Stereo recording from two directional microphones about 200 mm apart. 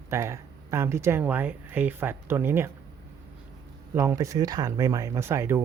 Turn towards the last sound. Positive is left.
turn(degrees=-15)  # may be behind; listen again after turning